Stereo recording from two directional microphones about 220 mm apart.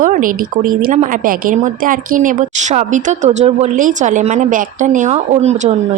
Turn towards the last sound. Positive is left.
turn(degrees=-30)  # may be behind; listen again after turning